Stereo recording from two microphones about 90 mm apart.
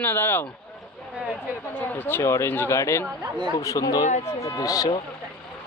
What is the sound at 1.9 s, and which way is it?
A man's voice, 25° left (ahead or behind).